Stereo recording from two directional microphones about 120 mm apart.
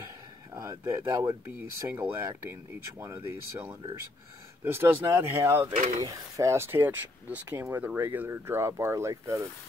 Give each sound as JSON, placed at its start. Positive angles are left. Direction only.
{"t": 0.5, "sound": "speech", "side_deg": -25}